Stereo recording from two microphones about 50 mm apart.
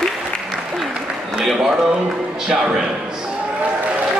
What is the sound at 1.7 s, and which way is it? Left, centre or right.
Music, centre.